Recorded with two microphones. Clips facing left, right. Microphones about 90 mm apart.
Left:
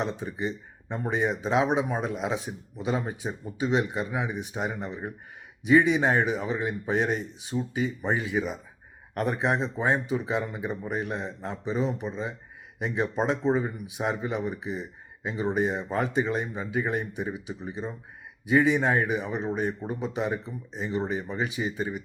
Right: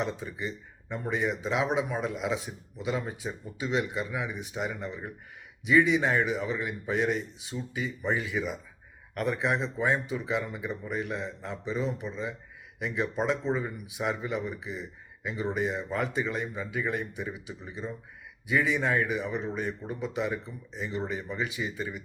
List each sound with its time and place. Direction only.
0.0 s a man's voice: 30° left (ahead or behind)
10.7 s a man's voice: 45° left (ahead or behind)
11.1 s speech: 30° left (ahead or behind)
14.4 s a man's voice: 40° left (ahead or behind)
14.8 s a man's voice: 30° left (ahead or behind)
19.4 s a man's voice: 40° left (ahead or behind)
19.9 s speech: 30° left (ahead or behind)